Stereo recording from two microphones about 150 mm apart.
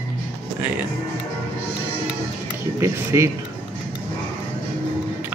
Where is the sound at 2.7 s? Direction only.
20° right (ahead or behind).